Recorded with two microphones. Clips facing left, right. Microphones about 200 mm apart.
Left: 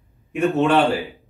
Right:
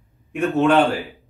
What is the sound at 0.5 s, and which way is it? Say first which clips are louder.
Speech: right 2 dB; centre (ahead or behind).